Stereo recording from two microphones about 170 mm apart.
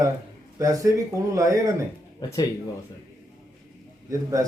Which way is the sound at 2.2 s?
25° left (ahead or behind).